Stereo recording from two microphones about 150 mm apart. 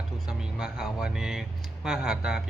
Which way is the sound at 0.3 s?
5° right (ahead or behind).